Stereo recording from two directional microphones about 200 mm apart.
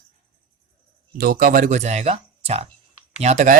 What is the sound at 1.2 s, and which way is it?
A man's voice, 45° right (ahead or behind).